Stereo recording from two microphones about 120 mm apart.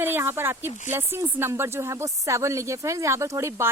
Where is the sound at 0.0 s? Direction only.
20° right (ahead or behind).